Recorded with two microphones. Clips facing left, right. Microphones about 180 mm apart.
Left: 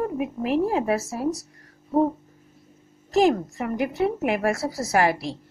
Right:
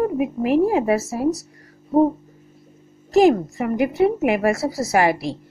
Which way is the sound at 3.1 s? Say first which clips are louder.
Right 5 dB; 10° right (ahead or behind).